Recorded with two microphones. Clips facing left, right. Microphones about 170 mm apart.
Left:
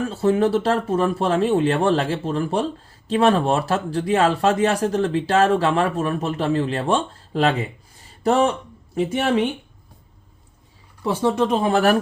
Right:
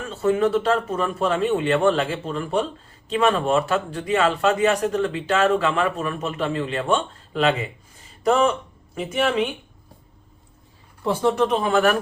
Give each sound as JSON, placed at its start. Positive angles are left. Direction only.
{"t": 0.0, "sound": "speech", "side_deg": 35}
{"t": 11.3, "sound": "speech", "side_deg": 20}
{"t": 11.7, "sound": "speech", "side_deg": 35}